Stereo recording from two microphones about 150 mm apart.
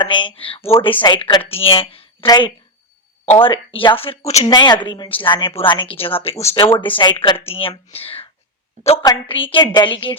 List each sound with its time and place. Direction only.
0.0 s a woman's voice: 35° left (ahead or behind)
2.2 s a woman's voice: 25° left (ahead or behind)